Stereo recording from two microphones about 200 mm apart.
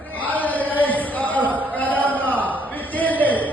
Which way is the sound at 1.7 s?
10° left (ahead or behind).